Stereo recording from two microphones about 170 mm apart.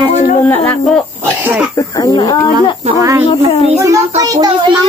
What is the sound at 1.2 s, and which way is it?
Throat clearing, 10° right (ahead or behind).